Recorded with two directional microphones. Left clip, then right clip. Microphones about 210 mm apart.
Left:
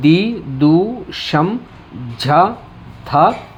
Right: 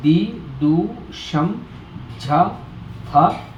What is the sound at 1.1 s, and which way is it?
Speech, 40° left (ahead or behind).